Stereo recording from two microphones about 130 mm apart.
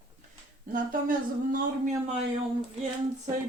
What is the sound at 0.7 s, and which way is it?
Speech, 90° right.